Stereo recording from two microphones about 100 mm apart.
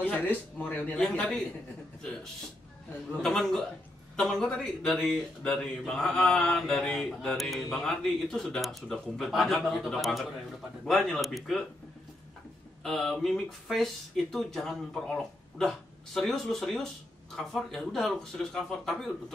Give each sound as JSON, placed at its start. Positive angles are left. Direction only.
{"t": 0.0, "sound": "speech", "side_deg": 20}
{"t": 1.0, "sound": "a man's voice", "side_deg": 5}
{"t": 3.1, "sound": "a man's voice", "side_deg": 5}
{"t": 12.8, "sound": "a man's voice", "side_deg": 5}